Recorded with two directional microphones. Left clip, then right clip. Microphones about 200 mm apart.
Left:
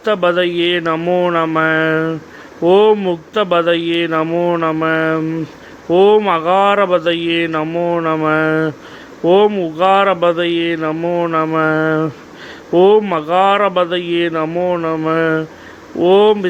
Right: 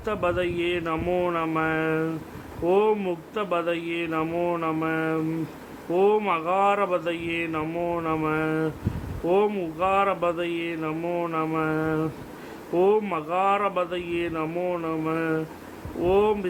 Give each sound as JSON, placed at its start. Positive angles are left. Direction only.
{"t": 0.0, "sound": "speech", "side_deg": 25}